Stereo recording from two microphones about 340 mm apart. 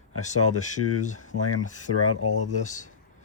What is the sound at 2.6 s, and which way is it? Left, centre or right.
Speech, left.